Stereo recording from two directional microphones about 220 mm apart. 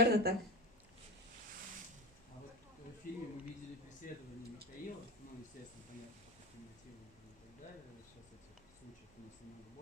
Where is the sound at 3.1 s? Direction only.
40° left (ahead or behind).